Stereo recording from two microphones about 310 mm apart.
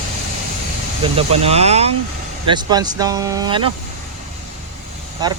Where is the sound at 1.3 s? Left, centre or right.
Centre.